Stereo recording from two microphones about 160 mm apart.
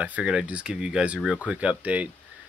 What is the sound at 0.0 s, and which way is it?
Speech, 5° right (ahead or behind).